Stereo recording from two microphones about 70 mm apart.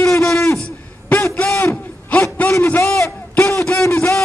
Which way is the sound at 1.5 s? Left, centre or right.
Left.